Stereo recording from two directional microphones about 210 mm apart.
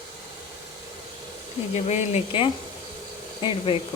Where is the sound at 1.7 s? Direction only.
30° left (ahead or behind).